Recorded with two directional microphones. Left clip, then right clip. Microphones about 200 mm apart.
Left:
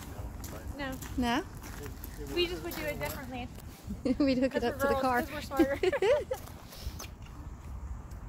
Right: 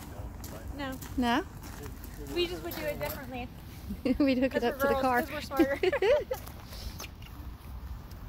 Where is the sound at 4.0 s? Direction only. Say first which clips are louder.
Right 1 dB; 5° right (ahead or behind); by 5.7 s 25° right (ahead or behind).